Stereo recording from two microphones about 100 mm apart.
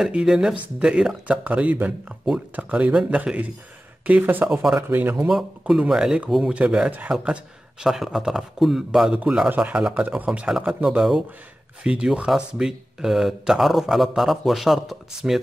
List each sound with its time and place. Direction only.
0.0 s speech: 5° right (ahead or behind)
5.3 s speech: 5° right (ahead or behind)